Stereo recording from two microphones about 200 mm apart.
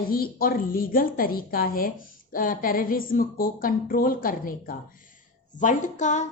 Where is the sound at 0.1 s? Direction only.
45° left (ahead or behind).